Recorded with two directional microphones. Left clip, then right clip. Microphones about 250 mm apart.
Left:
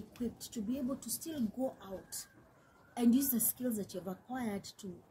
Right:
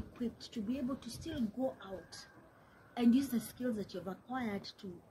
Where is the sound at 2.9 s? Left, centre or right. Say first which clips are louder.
Even; centre.